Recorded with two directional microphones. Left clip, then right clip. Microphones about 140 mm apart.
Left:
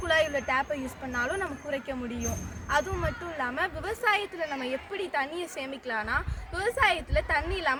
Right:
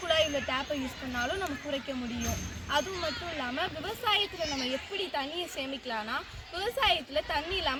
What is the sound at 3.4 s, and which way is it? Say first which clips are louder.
Speech: left 6 dB; 25° left (ahead or behind).